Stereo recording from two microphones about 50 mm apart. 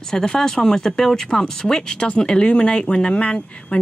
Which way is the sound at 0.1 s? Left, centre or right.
Centre.